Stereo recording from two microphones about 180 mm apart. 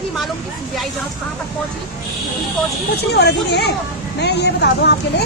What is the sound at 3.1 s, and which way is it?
Speech, 65° left (ahead or behind).